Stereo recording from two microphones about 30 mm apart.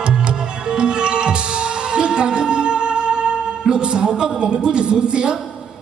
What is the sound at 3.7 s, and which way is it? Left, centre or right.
A woman's voice, right.